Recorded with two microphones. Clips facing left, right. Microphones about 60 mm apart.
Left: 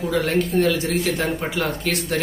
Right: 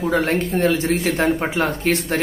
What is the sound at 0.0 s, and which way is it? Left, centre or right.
Speech, right.